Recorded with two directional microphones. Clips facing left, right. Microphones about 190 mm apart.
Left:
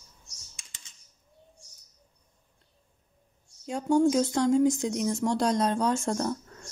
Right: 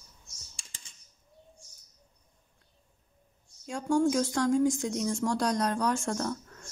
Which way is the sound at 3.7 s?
20° left (ahead or behind).